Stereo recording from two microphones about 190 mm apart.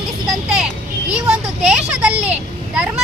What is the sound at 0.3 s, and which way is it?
Vehicle, centre (ahead or behind).